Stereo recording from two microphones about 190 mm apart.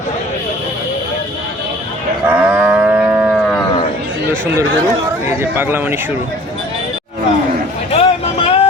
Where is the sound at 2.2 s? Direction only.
10° right (ahead or behind).